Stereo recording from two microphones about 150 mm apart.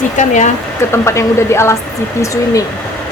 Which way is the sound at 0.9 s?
20° left (ahead or behind).